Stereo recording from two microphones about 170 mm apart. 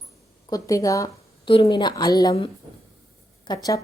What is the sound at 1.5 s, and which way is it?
Speech, 30° left (ahead or behind).